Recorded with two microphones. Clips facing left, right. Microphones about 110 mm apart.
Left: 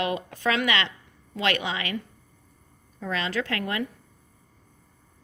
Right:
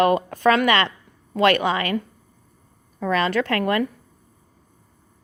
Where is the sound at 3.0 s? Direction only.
60° right (ahead or behind).